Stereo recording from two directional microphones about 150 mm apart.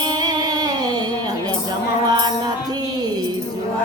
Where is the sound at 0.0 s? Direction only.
25° right (ahead or behind).